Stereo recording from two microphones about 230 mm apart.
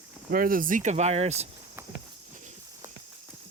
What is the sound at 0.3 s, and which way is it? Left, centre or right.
Speech, right.